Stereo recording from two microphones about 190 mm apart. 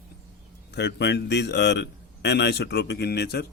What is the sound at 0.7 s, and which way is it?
Speech, 65° left (ahead or behind).